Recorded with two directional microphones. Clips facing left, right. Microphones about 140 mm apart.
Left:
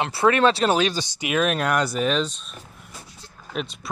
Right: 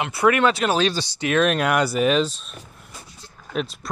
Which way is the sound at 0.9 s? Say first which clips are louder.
Right 3 dB; 10° left (ahead or behind).